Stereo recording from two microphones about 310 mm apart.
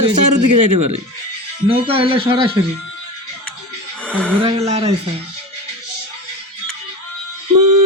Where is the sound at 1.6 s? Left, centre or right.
Centre.